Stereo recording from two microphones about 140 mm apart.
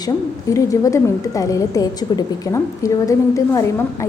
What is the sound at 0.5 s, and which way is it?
A woman's voice, 20° left (ahead or behind).